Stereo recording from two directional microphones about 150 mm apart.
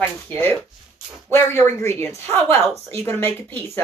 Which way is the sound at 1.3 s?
15° left (ahead or behind).